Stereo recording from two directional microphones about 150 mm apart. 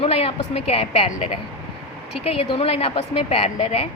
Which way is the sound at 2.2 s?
40° left (ahead or behind).